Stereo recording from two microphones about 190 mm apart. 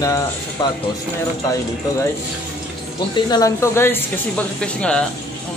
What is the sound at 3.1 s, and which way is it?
Speech, 20° left (ahead or behind).